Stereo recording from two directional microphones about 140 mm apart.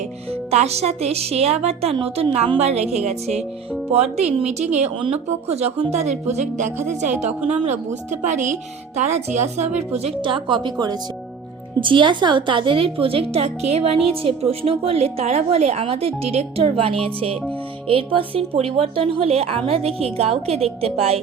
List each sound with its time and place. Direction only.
0.3 s a woman's voice: 50° right (ahead or behind)